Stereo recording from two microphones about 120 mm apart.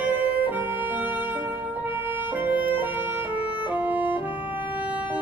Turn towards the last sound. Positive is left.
turn(degrees=-15)  # may be behind; listen again after turning